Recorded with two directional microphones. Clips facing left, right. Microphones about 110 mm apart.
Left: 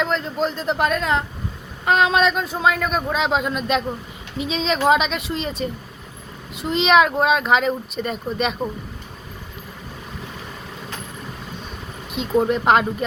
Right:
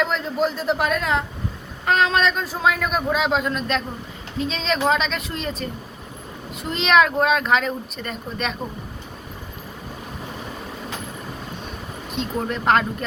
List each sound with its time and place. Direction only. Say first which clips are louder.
0.0 s a man's voice: even; centre (ahead or behind)
12.1 s a man's voice: left 7 dB; 5° left (ahead or behind)